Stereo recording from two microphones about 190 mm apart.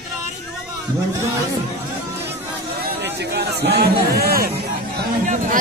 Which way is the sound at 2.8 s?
60° right (ahead or behind).